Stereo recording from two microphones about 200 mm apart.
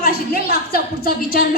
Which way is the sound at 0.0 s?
50° left (ahead or behind).